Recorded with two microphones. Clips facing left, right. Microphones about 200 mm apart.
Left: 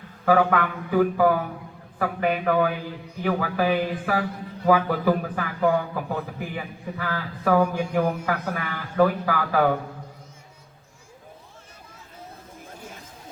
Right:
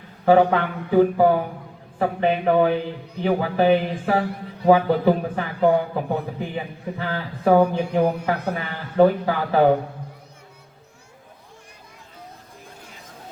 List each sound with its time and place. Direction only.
0.3 s a man's voice: 25° right (ahead or behind)